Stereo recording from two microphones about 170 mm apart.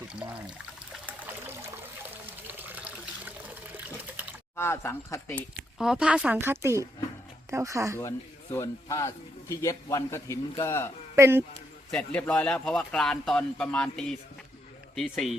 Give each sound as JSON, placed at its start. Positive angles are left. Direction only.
{"t": 1.0, "sound": "water", "side_deg": -10}
{"t": 4.5, "sound": "a man's voice", "side_deg": 15}
{"t": 5.8, "sound": "a woman's voice", "side_deg": -5}
{"t": 8.5, "sound": "a man's voice", "side_deg": 20}
{"t": 11.1, "sound": "speech", "side_deg": -15}
{"t": 11.9, "sound": "speech", "side_deg": 5}